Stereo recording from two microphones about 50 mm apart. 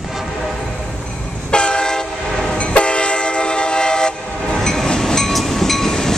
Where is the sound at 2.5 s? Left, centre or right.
Left.